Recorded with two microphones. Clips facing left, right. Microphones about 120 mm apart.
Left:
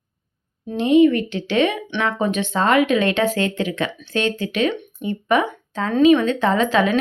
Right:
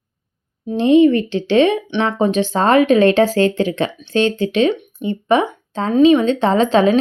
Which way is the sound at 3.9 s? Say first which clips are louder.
Right 5 dB; 20° right (ahead or behind).